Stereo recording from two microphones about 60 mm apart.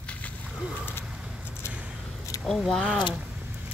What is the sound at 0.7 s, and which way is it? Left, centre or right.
Bird, left.